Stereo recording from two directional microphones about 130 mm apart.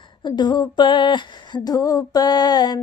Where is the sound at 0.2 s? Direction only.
35° left (ahead or behind).